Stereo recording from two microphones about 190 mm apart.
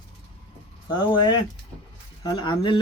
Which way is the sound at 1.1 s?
25° left (ahead or behind).